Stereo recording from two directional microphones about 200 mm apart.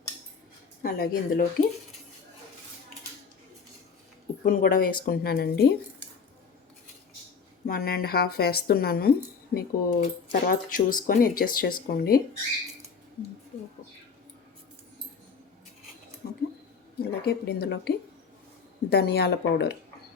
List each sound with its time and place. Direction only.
0.8 s speech: 50° left (ahead or behind)
4.4 s speech: 45° left (ahead or behind)
7.7 s speech: 50° left (ahead or behind)
16.2 s a sound: 45° left (ahead or behind)
17.0 s speech: 50° left (ahead or behind)